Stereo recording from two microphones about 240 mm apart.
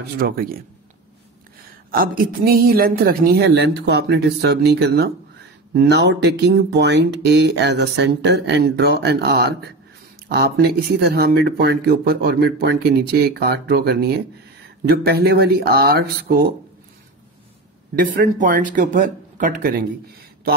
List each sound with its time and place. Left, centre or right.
0.2 s a woman's voice: right
1.9 s a woman's voice: right
17.9 s a woman's voice: right